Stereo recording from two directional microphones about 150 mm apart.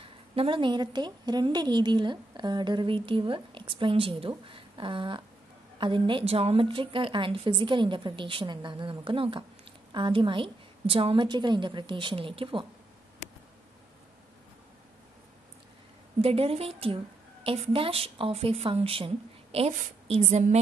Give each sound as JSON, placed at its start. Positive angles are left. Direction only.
{"t": 0.0, "sound": "a woman's voice", "side_deg": -35}
{"t": 16.2, "sound": "a woman's voice", "side_deg": -40}